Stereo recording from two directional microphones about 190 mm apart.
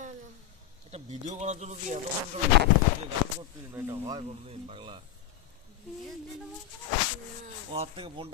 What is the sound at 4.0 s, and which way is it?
Speech, 30° right (ahead or behind).